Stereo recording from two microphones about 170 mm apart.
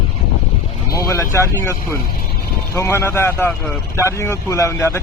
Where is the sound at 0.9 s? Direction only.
15° left (ahead or behind).